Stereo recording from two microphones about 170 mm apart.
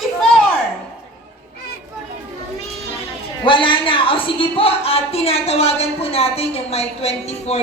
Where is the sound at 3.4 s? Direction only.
30° left (ahead or behind).